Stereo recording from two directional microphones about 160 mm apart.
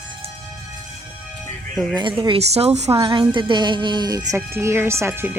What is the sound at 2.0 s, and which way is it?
A woman's voice, 30° right (ahead or behind).